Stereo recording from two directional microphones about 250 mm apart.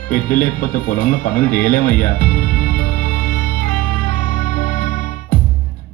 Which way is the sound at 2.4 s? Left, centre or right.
Left.